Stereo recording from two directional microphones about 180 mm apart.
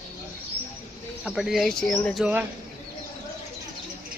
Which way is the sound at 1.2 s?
5° right (ahead or behind).